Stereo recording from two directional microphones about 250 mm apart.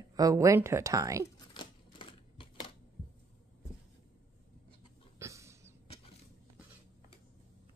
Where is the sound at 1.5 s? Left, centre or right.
Centre.